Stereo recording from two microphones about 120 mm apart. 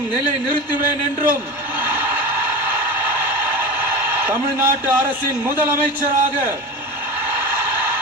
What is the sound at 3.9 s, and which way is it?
A man's voice, 15° right (ahead or behind).